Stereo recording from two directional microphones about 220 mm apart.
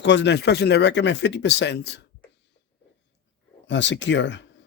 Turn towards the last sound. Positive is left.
turn(degrees=55)  # may be behind; listen again after turning